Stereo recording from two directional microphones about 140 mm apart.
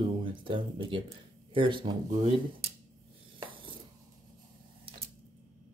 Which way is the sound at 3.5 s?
35° right (ahead or behind).